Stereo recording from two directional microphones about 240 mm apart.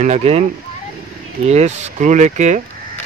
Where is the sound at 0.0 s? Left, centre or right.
Right.